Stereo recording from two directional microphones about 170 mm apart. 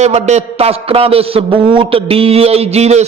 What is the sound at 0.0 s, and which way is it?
A man's voice, 40° right (ahead or behind).